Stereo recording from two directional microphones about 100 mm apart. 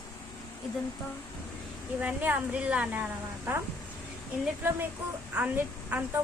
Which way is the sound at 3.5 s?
25° right (ahead or behind).